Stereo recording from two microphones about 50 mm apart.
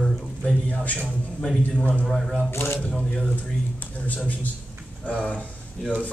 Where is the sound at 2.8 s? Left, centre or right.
Left.